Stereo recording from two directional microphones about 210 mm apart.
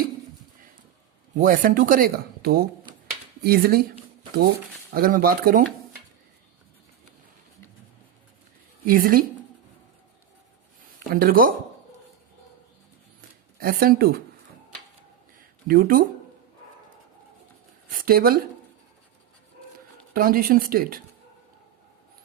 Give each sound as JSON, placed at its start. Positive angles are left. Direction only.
{"t": 1.4, "sound": "speech", "side_deg": -40}
{"t": 8.9, "sound": "speech", "side_deg": -40}
{"t": 11.1, "sound": "speech", "side_deg": -45}
{"t": 13.6, "sound": "speech", "side_deg": -45}
{"t": 15.4, "sound": "a sound", "side_deg": -40}
{"t": 17.8, "sound": "a sound", "side_deg": -45}
{"t": 20.1, "sound": "speech", "side_deg": -45}